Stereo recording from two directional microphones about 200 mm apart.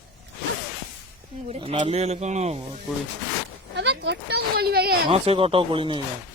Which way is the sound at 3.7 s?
60° right (ahead or behind).